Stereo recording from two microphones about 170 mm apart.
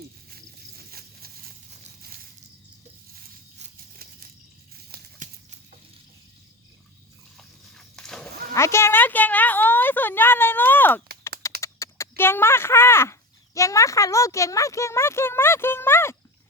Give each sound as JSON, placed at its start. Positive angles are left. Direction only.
{"t": 0.3, "sound": "a sound", "side_deg": -65}
{"t": 3.8, "sound": "a sound", "side_deg": -60}
{"t": 5.2, "sound": "horse", "side_deg": -50}
{"t": 7.3, "sound": "biting", "side_deg": 5}
{"t": 8.5, "sound": "a woman's voice", "side_deg": 15}
{"t": 11.2, "sound": "typing", "side_deg": 15}
{"t": 11.6, "sound": "speech", "side_deg": 15}